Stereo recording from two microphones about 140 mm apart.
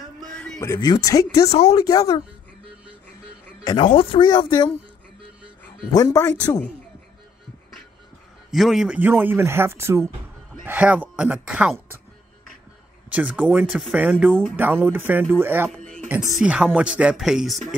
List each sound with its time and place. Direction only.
0.2 s a sound: 5° left (ahead or behind)
0.7 s speech: 25° left (ahead or behind)
1.5 s speech: 45° left (ahead or behind)
1.8 s speech: 25° left (ahead or behind)
3.6 s speech: 35° left (ahead or behind)
5.9 s speech: 25° left (ahead or behind)
8.5 s speech: centre (ahead or behind)
13.1 s speech: 10° right (ahead or behind)
14.6 s speech: 15° right (ahead or behind)